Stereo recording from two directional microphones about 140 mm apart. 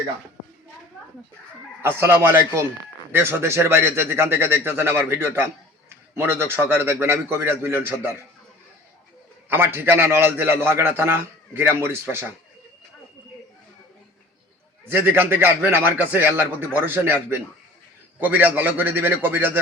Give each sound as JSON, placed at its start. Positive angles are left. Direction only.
{"t": 1.8, "sound": "a man's voice", "side_deg": -15}
{"t": 9.5, "sound": "a man's voice", "side_deg": -15}
{"t": 14.9, "sound": "a man's voice", "side_deg": -15}